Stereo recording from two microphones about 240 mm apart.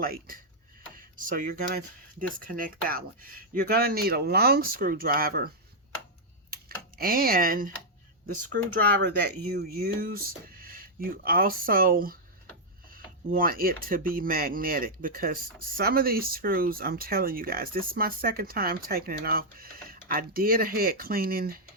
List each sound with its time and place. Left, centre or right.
0.0 s speech: right
6.5 s computer keyboard: right
9.2 s speech: right